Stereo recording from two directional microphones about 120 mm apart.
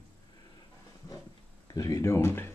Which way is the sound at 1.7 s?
30° left (ahead or behind).